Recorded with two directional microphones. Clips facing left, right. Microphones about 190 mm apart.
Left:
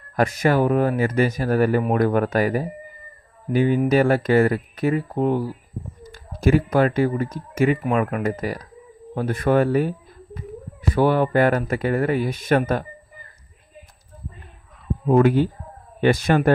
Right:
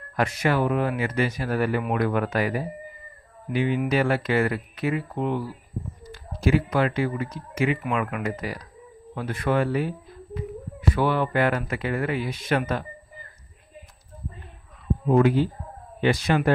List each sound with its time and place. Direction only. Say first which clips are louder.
0.1 s speech: left 4 dB; 45° left (ahead or behind)
15.0 s speech: left 3 dB; 50° left (ahead or behind)